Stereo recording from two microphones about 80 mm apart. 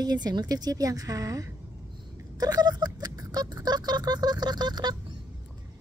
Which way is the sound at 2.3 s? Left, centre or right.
Right.